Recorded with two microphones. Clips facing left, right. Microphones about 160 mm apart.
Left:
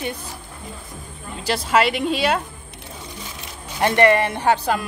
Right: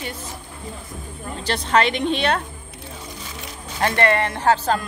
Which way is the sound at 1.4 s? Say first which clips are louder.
Left 1 dB; 5° left (ahead or behind).